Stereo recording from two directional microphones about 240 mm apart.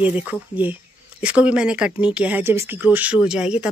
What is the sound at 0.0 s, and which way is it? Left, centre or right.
Speech, centre.